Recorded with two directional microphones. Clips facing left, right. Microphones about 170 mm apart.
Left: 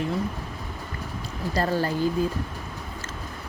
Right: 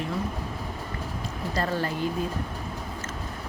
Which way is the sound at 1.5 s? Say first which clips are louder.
Left 3 dB; 35° left (ahead or behind).